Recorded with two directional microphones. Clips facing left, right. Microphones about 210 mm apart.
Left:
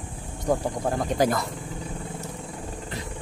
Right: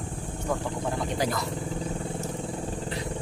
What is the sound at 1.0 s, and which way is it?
Speech, 45° left (ahead or behind).